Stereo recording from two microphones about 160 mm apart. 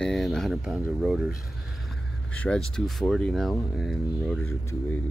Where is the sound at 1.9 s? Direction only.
5° left (ahead or behind).